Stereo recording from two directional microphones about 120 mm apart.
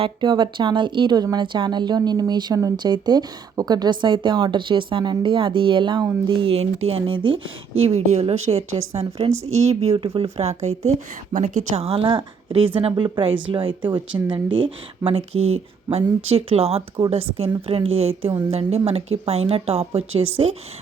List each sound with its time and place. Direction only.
0.0 s a woman's voice: 35° right (ahead or behind)
6.5 s speech: 55° right (ahead or behind)
7.0 s a woman's voice: 45° right (ahead or behind)
7.8 s speech: 60° right (ahead or behind)
9.0 s a woman's voice: 50° right (ahead or behind)
11.3 s a woman's voice: 90° right
11.9 s a woman's voice: 45° right (ahead or behind)